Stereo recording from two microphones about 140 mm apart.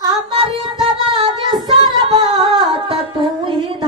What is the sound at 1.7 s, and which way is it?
Music, 35° right (ahead or behind).